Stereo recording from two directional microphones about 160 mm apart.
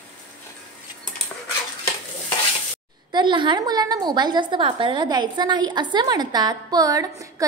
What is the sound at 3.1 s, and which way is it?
A woman's voice, 30° right (ahead or behind).